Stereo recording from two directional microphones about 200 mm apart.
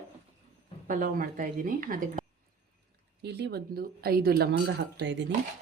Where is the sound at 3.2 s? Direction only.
55° right (ahead or behind).